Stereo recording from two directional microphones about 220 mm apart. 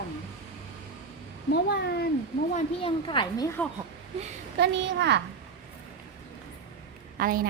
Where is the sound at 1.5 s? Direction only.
45° left (ahead or behind).